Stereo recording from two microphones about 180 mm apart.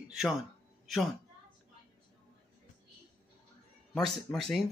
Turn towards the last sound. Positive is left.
turn(degrees=0)  # may be behind; listen again after turning